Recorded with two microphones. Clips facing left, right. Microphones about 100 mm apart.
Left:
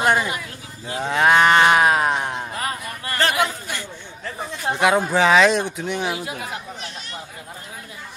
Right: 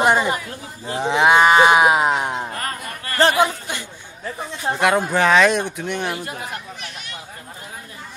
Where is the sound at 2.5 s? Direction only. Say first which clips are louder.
Left 1 dB; 10° left (ahead or behind).